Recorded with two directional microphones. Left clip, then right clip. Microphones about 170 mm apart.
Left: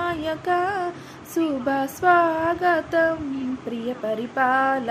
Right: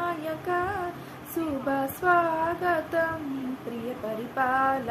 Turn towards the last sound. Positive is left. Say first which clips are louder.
# left 4 dB
turn(degrees=50)  # may be behind; listen again after turning